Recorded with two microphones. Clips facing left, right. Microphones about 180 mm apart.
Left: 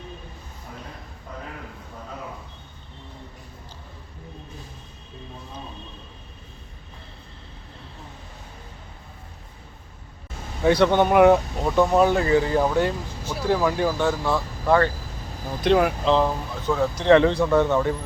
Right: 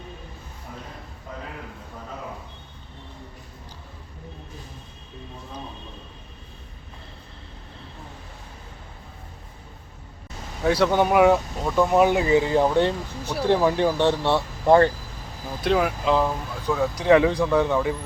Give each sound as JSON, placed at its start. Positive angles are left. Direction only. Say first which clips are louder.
{"t": 10.6, "sound": "speech", "louder": "left 2 dB", "side_deg": 0}
{"t": 11.6, "sound": "speech", "louder": "even", "side_deg": 10}
{"t": 11.9, "sound": "speech", "louder": "right 3 dB", "side_deg": -15}
{"t": 15.6, "sound": "speech", "louder": "left 2 dB", "side_deg": 0}